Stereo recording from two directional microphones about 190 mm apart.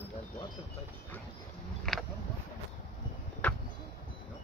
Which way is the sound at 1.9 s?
Centre (ahead or behind).